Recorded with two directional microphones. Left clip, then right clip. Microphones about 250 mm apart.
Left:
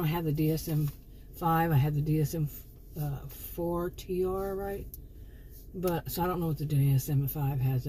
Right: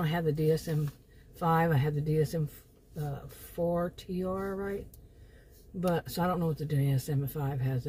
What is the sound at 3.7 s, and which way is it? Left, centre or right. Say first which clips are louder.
Speech: right 1 dB; right.